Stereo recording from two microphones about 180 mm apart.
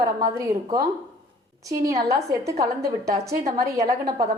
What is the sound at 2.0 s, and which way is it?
A woman's voice, 20° right (ahead or behind).